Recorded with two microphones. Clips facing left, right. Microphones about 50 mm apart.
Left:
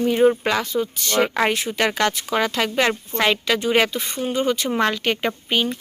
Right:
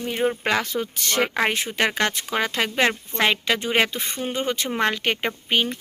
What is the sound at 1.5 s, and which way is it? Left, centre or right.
Speech, right.